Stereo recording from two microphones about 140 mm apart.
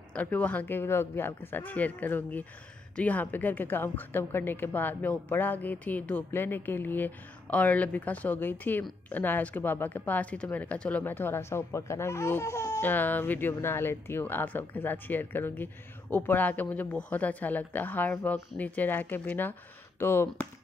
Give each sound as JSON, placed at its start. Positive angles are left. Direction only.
{"t": 0.1, "sound": "a woman's voice", "side_deg": 10}